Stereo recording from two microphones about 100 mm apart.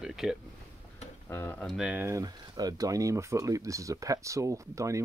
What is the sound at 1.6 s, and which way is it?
Speech, 10° right (ahead or behind).